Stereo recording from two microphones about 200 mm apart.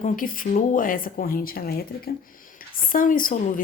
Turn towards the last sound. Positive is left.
turn(degrees=45)  # may be behind; listen again after turning